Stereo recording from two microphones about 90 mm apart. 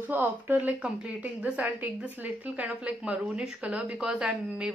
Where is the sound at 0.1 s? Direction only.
20° right (ahead or behind).